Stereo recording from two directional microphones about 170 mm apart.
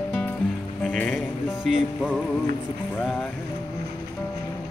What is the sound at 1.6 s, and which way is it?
Speech, 5° right (ahead or behind).